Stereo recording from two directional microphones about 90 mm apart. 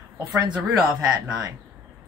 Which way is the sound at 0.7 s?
40° right (ahead or behind).